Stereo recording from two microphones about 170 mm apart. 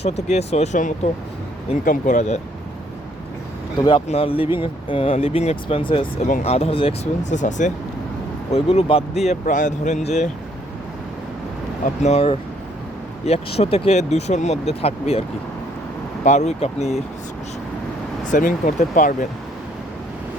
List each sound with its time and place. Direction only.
0.0 s speech: 40° left (ahead or behind)
3.8 s speech: 30° left (ahead or behind)
6.2 s speech: 45° left (ahead or behind)
12.0 s speech: 35° left (ahead or behind)
16.2 s speech: 40° left (ahead or behind)
18.3 s speech: 50° left (ahead or behind)